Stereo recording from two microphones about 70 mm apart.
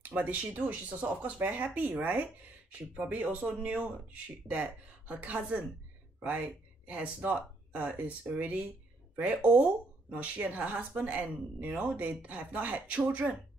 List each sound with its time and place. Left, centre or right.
0.0 s speech: right